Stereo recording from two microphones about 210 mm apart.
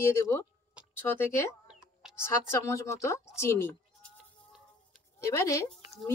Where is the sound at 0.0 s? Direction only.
15° left (ahead or behind).